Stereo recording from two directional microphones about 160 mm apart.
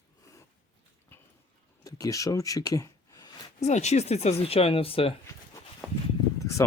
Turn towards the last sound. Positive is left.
turn(degrees=20)  # may be behind; listen again after turning